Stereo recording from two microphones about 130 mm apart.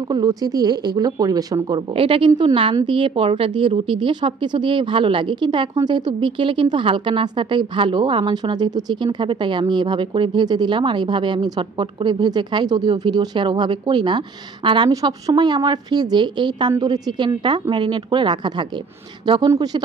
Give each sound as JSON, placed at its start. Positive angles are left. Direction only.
{"t": 0.1, "sound": "speech", "side_deg": -30}
{"t": 2.0, "sound": "a woman's voice", "side_deg": -45}